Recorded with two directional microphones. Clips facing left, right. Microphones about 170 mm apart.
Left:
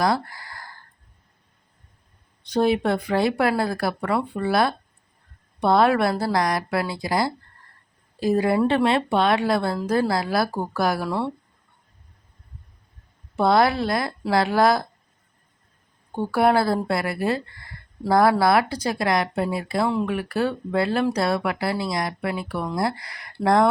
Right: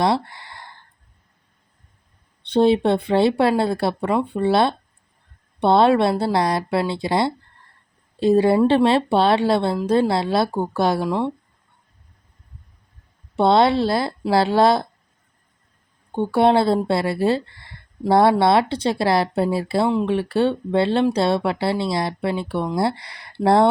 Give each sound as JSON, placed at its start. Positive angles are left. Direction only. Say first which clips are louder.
{"t": 0.0, "sound": "a sound", "louder": "right 2 dB", "side_deg": -25}
{"t": 2.5, "sound": "speech", "louder": "right 4 dB", "side_deg": -30}
{"t": 13.3, "sound": "speech", "louder": "right 3 dB", "side_deg": -25}
{"t": 16.1, "sound": "speech", "louder": "right 3 dB", "side_deg": -25}